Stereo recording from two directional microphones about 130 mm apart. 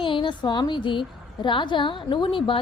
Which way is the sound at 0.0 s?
40° left (ahead or behind).